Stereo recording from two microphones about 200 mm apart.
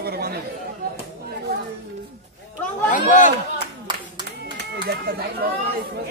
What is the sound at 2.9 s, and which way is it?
Speech, 40° left (ahead or behind).